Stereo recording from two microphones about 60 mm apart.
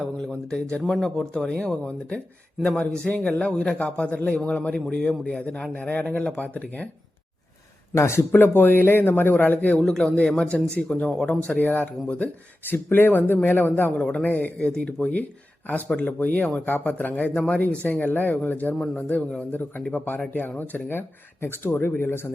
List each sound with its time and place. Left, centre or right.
0.0 s a man's voice: centre; by 6.8 s left
7.9 s speech: left
8.3 s a man's voice: left
9.8 s speech: centre
10.1 s a man's voice: centre; by 13.9 s left
13.9 s a man's voice: centre; by 22.3 s left